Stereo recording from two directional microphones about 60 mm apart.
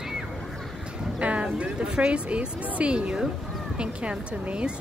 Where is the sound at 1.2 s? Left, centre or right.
Centre.